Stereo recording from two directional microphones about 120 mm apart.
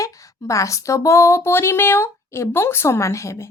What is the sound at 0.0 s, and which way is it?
A child's voice, 25° left (ahead or behind).